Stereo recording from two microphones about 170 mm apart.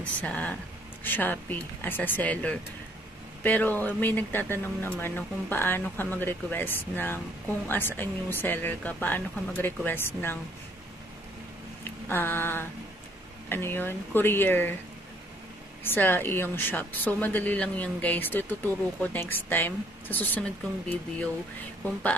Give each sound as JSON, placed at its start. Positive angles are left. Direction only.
{"t": 0.0, "sound": "speech", "side_deg": 10}
{"t": 11.8, "sound": "a sound", "side_deg": 15}
{"t": 13.5, "sound": "speech", "side_deg": 15}
{"t": 15.8, "sound": "speech", "side_deg": 10}